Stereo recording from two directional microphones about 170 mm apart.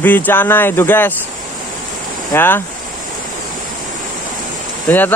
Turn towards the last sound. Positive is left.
turn(degrees=10)  # may be behind; listen again after turning